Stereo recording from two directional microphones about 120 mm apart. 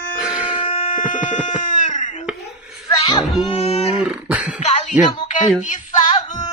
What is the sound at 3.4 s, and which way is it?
Wail, 55° left (ahead or behind).